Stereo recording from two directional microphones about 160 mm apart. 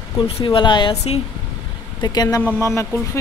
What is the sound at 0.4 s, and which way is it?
Speech, 30° left (ahead or behind).